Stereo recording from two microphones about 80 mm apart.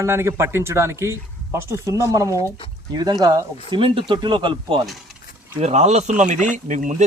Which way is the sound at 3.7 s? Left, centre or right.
Right.